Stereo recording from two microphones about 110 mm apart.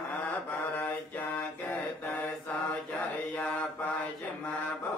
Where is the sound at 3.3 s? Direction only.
10° left (ahead or behind).